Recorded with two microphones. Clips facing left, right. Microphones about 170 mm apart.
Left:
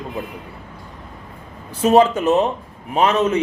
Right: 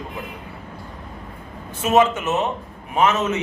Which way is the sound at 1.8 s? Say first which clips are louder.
Left 4 dB; 35° left (ahead or behind).